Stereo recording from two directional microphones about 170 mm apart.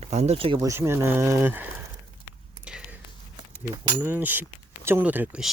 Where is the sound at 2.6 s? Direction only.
5° right (ahead or behind).